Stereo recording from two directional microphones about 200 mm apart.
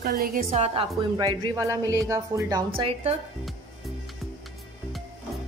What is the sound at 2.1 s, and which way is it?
Speech, 15° right (ahead or behind).